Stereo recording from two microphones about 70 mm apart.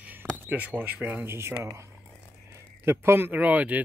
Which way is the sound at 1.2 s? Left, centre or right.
Right.